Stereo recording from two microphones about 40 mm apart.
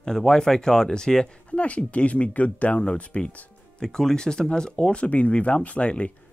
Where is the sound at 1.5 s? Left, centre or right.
Left.